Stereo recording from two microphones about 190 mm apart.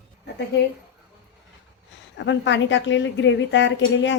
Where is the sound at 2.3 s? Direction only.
75° left (ahead or behind).